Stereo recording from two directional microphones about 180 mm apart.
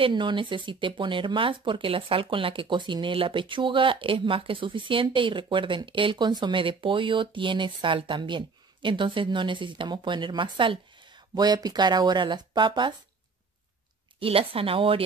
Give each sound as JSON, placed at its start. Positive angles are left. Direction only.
{"t": 0.0, "sound": "speech", "side_deg": -25}
{"t": 14.2, "sound": "speech", "side_deg": -30}